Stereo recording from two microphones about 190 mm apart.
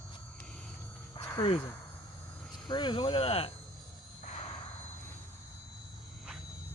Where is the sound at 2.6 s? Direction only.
25° left (ahead or behind).